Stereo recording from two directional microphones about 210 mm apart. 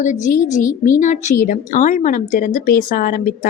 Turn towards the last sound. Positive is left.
turn(degrees=45)  # may be behind; listen again after turning